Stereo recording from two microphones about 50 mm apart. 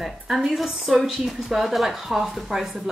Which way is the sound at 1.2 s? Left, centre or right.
Centre.